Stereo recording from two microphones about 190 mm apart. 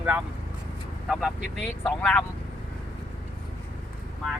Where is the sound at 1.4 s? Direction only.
70° left (ahead or behind).